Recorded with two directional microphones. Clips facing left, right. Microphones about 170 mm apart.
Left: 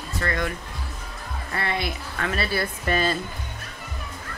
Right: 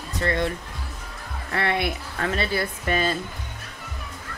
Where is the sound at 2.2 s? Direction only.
25° right (ahead or behind).